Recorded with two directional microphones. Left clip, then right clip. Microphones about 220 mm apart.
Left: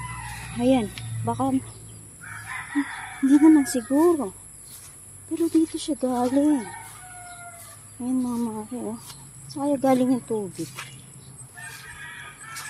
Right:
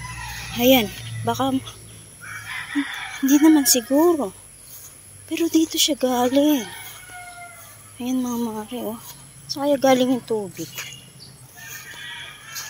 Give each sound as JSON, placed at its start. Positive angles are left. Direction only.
{"t": 0.6, "sound": "speech", "side_deg": -5}
{"t": 3.3, "sound": "speech", "side_deg": 5}
{"t": 5.3, "sound": "speech", "side_deg": -5}
{"t": 8.0, "sound": "speech", "side_deg": 0}